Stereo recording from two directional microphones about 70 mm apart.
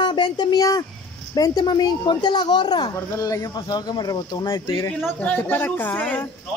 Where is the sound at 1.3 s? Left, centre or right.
Left.